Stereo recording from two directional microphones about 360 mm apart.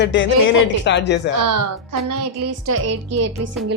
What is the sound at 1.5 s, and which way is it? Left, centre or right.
Speech, right.